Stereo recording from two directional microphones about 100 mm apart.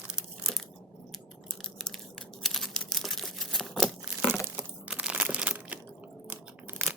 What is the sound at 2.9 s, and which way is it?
Crumpling, centre (ahead or behind).